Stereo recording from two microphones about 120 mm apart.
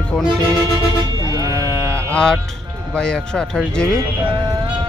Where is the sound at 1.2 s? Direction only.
30° right (ahead or behind).